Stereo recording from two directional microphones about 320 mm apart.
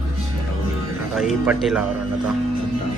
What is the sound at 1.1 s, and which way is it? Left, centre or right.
Speech, centre.